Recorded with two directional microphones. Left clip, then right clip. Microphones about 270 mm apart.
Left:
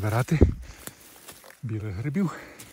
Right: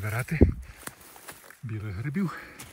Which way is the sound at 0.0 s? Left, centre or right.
Centre.